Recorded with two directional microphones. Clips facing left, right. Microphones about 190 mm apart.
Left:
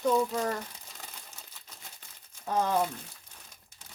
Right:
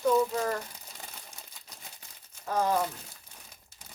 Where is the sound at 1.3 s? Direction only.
10° right (ahead or behind).